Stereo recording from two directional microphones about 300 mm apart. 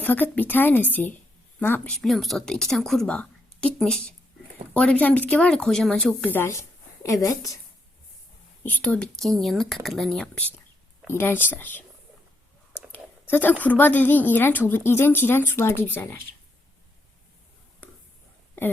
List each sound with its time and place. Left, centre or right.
0.0 s speech: centre
8.6 s a woman's voice: centre
12.9 s a sound: centre
13.5 s a woman's voice: centre
18.6 s speech: centre